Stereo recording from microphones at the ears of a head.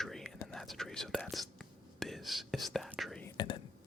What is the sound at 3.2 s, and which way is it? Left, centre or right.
Whispering, left.